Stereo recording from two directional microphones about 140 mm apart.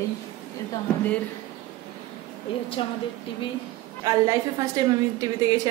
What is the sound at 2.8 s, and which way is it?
Speech, 40° left (ahead or behind).